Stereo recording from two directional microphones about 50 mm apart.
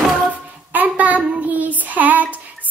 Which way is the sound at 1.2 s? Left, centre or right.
Right.